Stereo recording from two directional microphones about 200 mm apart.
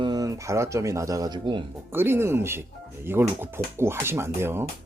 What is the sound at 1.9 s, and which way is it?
Speech, 10° right (ahead or behind).